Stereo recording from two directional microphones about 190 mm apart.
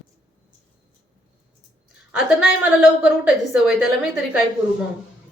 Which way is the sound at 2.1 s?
5° right (ahead or behind).